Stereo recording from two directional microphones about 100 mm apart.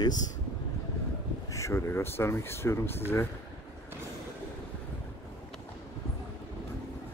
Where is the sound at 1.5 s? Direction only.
30° left (ahead or behind).